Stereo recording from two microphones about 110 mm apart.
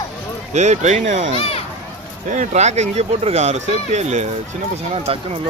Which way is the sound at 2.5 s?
90° right.